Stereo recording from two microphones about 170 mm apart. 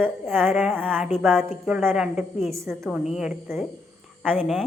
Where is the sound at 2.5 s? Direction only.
15° right (ahead or behind).